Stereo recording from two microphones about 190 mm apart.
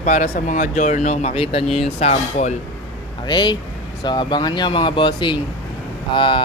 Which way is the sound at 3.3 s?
25° left (ahead or behind).